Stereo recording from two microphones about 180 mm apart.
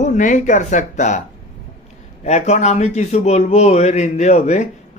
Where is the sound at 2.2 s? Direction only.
40° left (ahead or behind).